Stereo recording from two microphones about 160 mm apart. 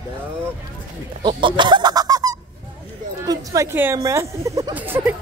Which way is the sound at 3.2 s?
20° right (ahead or behind).